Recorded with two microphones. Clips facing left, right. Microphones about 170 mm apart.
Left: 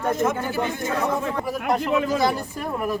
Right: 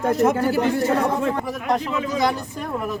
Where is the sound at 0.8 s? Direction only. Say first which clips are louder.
Right 4 dB; 35° right (ahead or behind).